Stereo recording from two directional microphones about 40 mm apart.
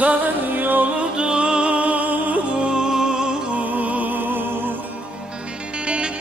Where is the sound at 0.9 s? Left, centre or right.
Right.